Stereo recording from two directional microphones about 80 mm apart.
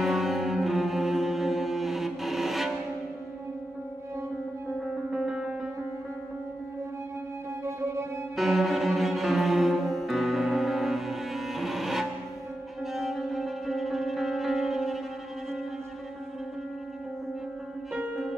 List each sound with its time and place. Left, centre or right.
0.0 s cello: centre
5.1 s music: centre
7.6 s music: right
8.4 s cello: centre
12.8 s music: centre
17.9 s music: centre